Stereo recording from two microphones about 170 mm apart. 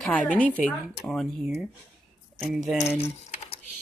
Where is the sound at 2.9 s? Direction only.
35° left (ahead or behind).